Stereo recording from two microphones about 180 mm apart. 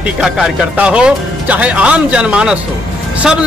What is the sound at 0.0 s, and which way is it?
A man's voice, 5° right (ahead or behind).